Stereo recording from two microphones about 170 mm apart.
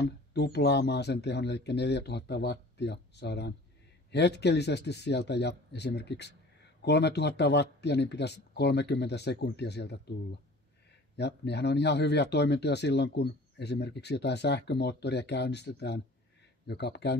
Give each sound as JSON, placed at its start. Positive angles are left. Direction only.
{"t": 0.0, "sound": "speech", "side_deg": 80}
{"t": 11.1, "sound": "speech", "side_deg": 80}